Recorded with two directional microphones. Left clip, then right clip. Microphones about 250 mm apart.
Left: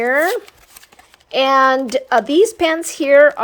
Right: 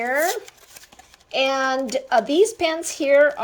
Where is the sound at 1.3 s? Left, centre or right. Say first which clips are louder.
Left 8 dB; centre.